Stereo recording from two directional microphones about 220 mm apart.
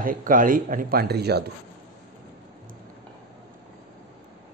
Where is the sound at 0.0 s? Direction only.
40° right (ahead or behind).